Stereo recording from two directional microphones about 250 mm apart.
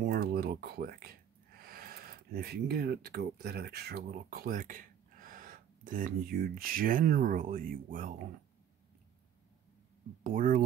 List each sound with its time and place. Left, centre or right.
0.1 s speech: right
10.2 s speech: right